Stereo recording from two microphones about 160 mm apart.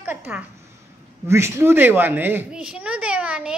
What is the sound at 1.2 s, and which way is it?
A woman's voice, 15° right (ahead or behind).